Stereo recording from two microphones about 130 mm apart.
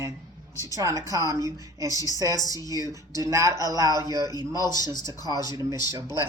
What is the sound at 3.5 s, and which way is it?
Speech, 30° left (ahead or behind).